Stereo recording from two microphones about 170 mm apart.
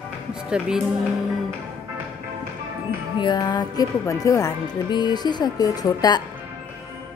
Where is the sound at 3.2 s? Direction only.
25° left (ahead or behind).